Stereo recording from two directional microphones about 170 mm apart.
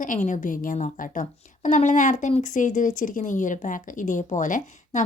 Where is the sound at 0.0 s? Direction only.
50° left (ahead or behind).